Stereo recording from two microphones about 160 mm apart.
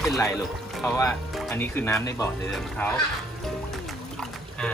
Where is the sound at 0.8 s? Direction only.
20° left (ahead or behind).